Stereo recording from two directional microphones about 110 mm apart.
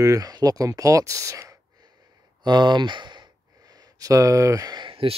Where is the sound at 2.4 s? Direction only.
45° right (ahead or behind).